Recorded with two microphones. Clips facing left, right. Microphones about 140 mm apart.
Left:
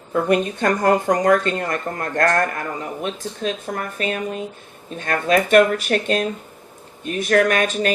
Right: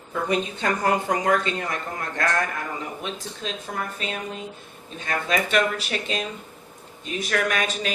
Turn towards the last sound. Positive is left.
turn(degrees=50)  # may be behind; listen again after turning